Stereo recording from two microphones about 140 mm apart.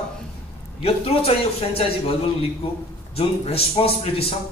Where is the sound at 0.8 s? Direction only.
45° left (ahead or behind).